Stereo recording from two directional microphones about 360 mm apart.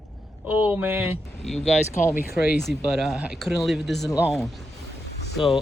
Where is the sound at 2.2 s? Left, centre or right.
Centre.